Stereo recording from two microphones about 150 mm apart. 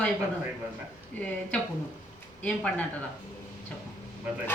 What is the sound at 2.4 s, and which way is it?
Speech, 10° left (ahead or behind).